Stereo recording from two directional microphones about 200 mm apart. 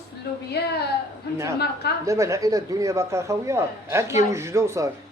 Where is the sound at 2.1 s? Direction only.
15° right (ahead or behind).